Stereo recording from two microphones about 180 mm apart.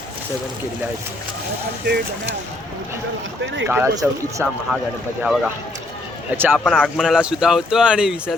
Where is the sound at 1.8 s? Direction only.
65° right (ahead or behind).